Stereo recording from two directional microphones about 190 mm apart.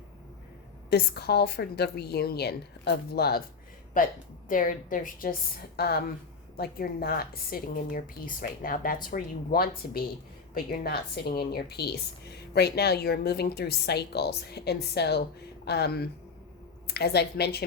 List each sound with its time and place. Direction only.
0.9 s a woman's voice: 60° left (ahead or behind)
4.0 s a woman's voice: 45° left (ahead or behind)